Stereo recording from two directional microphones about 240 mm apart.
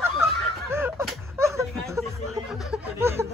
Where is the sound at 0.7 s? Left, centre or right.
Centre.